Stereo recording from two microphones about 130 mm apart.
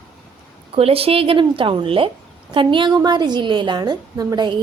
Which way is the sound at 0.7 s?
50° right (ahead or behind).